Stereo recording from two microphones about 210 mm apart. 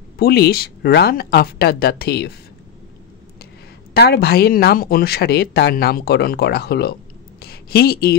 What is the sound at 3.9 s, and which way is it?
A woman's voice, 50° left (ahead or behind).